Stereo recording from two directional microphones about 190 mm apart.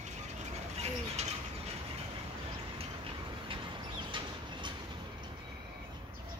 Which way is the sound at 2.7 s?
30° right (ahead or behind).